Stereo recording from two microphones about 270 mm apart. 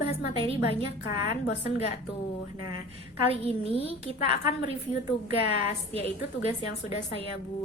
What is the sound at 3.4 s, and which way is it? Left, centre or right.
Speech, left.